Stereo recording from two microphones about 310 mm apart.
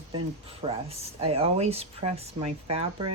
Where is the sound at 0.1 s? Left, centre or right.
Centre.